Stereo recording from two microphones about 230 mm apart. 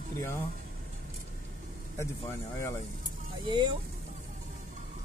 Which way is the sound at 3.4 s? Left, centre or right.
Centre.